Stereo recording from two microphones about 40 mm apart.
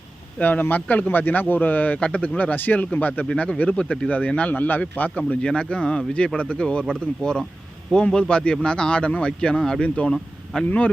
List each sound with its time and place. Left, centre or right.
0.3 s speech: left
3.3 s a man's voice: left
4.4 s speech: left
5.4 s a man's voice: left
5.6 s a man's voice: left
6.8 s a man's voice: centre
9.8 s speech: left
10.1 s speech: centre
10.7 s speech: left